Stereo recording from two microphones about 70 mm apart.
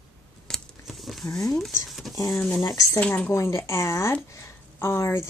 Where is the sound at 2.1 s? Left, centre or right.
Left.